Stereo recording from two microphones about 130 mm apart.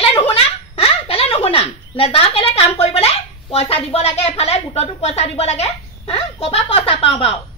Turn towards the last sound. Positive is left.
turn(degrees=45)  # may be behind; listen again after turning